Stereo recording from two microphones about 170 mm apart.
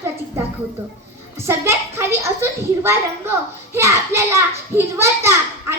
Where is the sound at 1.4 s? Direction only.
15° right (ahead or behind).